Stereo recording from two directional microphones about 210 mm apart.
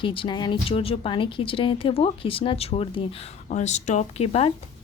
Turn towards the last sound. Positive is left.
turn(degrees=30)  # may be behind; listen again after turning